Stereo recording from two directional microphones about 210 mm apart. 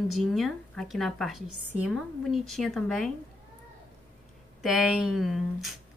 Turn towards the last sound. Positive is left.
turn(degrees=0)  # may be behind; listen again after turning